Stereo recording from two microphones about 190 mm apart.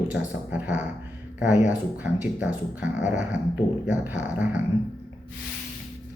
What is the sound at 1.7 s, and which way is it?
Speech, 10° right (ahead or behind).